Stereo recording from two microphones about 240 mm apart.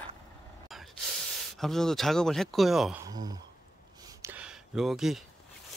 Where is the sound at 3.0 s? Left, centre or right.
Centre.